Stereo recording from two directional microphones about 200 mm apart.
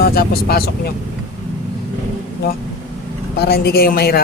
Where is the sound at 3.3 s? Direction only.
50° left (ahead or behind).